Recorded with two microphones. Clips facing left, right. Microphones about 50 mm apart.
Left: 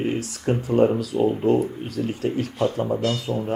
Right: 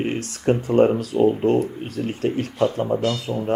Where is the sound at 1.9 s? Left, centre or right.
Right.